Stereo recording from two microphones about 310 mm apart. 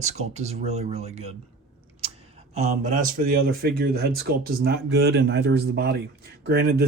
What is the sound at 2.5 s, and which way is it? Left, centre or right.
Speech, right.